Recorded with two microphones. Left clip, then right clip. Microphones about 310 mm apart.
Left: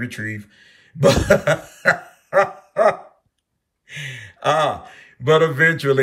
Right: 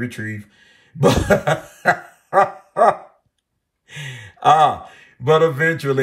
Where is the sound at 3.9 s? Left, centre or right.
Centre.